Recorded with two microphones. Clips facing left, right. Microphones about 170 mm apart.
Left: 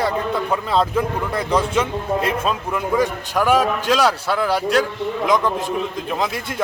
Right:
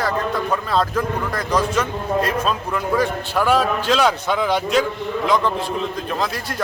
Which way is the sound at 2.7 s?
5° left (ahead or behind).